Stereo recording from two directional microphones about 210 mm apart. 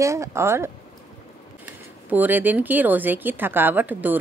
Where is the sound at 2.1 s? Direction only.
10° right (ahead or behind).